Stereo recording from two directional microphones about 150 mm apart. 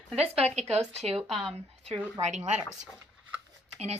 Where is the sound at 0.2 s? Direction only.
45° right (ahead or behind).